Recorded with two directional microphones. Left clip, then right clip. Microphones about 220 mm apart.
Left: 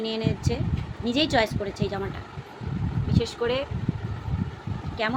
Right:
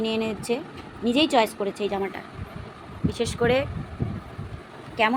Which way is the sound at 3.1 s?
35° right (ahead or behind).